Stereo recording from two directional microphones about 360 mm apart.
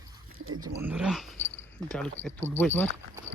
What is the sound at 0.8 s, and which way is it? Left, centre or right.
Speech, centre.